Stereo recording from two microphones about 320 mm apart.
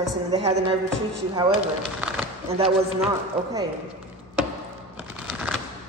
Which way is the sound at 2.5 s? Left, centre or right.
Centre.